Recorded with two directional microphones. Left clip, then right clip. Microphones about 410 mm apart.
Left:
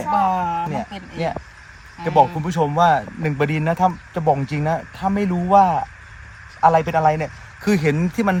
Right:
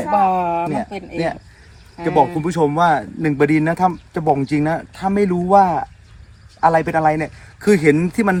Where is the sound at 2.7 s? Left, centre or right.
Left.